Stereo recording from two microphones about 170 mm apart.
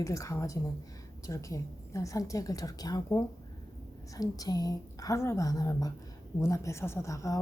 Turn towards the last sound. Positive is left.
turn(degrees=20)  # may be behind; listen again after turning